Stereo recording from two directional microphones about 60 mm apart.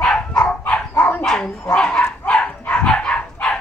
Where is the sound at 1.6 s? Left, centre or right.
Centre.